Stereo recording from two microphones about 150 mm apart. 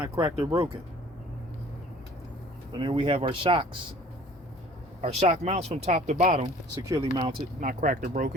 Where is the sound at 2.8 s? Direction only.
35° right (ahead or behind).